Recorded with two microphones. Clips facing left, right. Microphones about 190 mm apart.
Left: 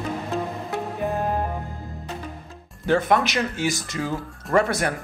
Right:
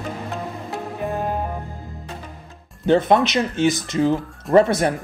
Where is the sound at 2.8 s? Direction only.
20° right (ahead or behind).